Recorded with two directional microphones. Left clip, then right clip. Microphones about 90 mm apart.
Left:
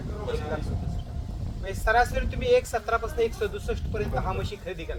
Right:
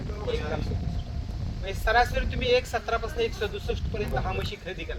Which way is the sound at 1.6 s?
55° left (ahead or behind).